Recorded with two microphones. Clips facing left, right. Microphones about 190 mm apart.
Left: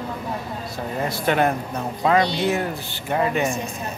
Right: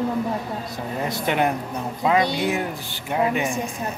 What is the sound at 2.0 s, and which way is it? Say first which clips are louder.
Speech: left 1 dB; 5° right (ahead or behind).